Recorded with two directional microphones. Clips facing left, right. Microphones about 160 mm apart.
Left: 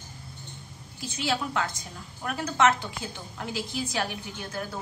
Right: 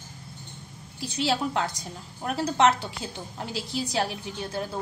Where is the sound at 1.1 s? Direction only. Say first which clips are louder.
Right 3 dB; 35° right (ahead or behind).